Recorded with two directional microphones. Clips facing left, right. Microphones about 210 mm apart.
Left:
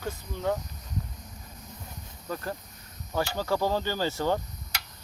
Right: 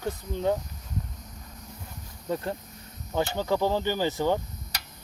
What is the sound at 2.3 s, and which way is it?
Speech, 30° right (ahead or behind).